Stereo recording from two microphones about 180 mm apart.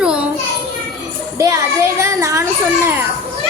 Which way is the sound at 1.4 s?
15° right (ahead or behind).